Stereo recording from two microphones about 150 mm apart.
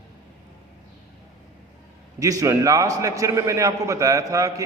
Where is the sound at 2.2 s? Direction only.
20° right (ahead or behind).